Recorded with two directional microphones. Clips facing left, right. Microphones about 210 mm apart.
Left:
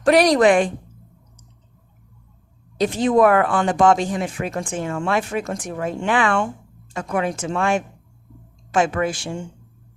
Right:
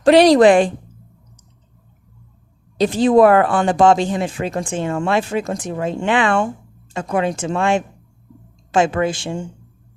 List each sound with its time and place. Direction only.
0.0 s speech: 25° right (ahead or behind)
2.7 s speech: 30° right (ahead or behind)